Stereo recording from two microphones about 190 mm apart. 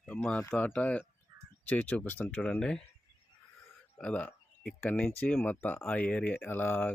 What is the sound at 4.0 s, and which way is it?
Speech, 5° left (ahead or behind).